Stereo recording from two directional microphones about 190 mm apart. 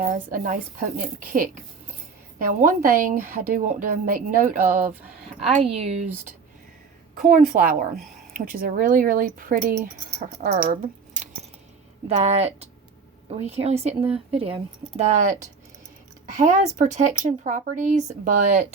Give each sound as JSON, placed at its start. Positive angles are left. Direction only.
{"t": 0.0, "sound": "a woman's voice", "side_deg": -45}
{"t": 4.6, "sound": "speech", "side_deg": -10}
{"t": 5.6, "sound": "speech", "side_deg": -35}
{"t": 7.2, "sound": "a woman's voice", "side_deg": -45}
{"t": 10.7, "sound": "squish", "side_deg": -40}
{"t": 12.0, "sound": "speech", "side_deg": -35}